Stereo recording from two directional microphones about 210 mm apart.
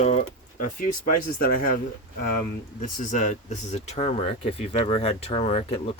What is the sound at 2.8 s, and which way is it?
Speech, 35° left (ahead or behind).